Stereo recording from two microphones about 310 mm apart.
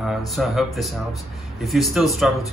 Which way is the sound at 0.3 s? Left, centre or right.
Centre.